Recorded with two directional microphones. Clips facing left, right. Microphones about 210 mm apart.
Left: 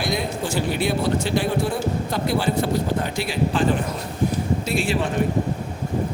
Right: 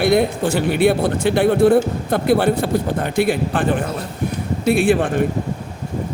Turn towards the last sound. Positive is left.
turn(degrees=-55)  # may be behind; listen again after turning